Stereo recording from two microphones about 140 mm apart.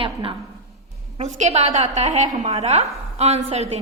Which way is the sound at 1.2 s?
55° right (ahead or behind).